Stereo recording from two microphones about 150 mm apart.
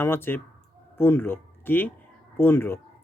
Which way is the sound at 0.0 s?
15° left (ahead or behind).